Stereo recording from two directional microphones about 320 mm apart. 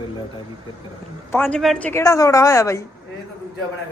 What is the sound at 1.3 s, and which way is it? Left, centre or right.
A woman's voice, centre.